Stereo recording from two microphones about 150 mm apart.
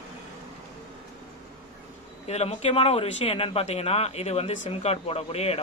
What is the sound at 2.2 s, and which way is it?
Speech, 45° left (ahead or behind).